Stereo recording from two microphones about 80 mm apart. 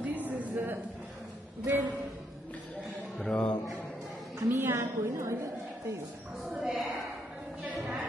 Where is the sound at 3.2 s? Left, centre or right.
Centre.